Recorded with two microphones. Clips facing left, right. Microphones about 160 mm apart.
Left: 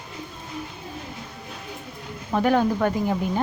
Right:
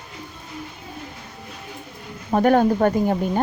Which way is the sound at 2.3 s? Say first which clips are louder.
Right 4 dB; 45° right (ahead or behind).